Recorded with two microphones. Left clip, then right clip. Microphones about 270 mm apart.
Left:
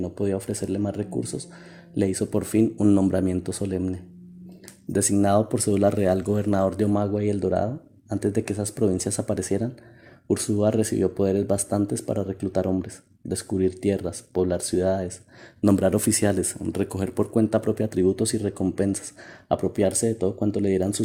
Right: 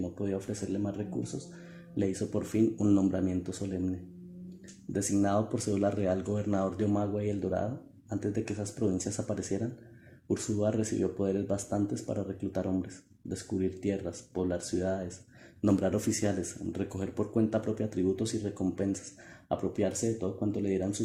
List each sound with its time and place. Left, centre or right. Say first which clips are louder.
0.2 s speech: left 10 dB; left